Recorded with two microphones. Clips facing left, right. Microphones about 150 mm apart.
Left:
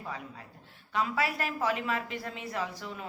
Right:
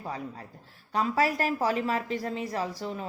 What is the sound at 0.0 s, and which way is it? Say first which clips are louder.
A woman's voice: right 4 dB; 35° right (ahead or behind).